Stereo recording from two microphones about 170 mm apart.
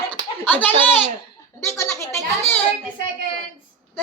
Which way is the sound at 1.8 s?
15° left (ahead or behind).